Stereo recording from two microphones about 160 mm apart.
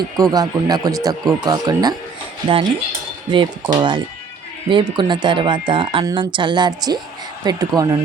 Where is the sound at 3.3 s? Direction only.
30° right (ahead or behind).